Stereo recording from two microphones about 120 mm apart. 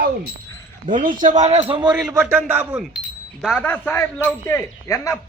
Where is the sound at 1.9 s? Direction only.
5° right (ahead or behind).